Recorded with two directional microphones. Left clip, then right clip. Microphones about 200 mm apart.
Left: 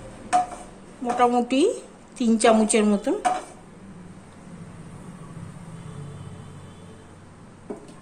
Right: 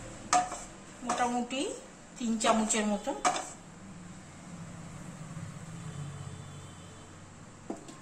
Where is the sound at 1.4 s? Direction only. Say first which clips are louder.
Left 14 dB; 60° left (ahead or behind).